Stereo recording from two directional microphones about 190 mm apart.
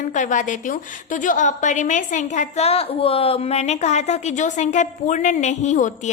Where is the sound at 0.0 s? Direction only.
40° left (ahead or behind).